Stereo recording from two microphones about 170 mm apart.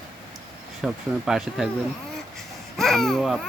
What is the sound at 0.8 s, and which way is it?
Speech, centre (ahead or behind).